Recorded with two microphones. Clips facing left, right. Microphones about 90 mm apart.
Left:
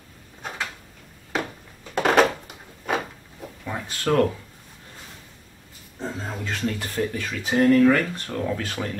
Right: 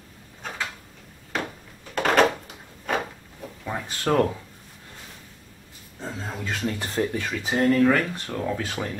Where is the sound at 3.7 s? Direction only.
15° right (ahead or behind).